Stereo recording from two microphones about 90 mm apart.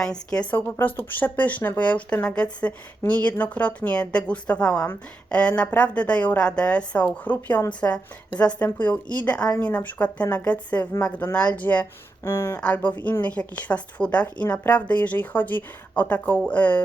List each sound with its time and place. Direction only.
0.0 s a woman's voice: 10° left (ahead or behind)
0.5 s a woman's voice: 20° left (ahead or behind)
12.2 s speech: 30° left (ahead or behind)
12.5 s a woman's voice: 15° left (ahead or behind)